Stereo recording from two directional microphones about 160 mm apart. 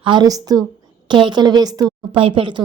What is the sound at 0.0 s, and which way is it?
A woman's voice, 30° right (ahead or behind).